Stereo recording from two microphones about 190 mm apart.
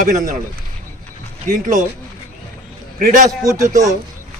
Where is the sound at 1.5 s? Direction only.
45° right (ahead or behind).